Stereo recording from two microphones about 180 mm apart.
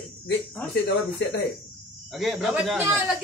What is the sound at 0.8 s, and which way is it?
Speech, 70° left (ahead or behind).